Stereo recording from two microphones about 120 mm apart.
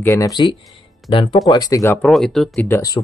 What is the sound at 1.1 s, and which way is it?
Speech, 45° left (ahead or behind).